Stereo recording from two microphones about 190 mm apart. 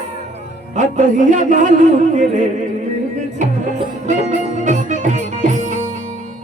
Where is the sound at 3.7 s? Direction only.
40° right (ahead or behind).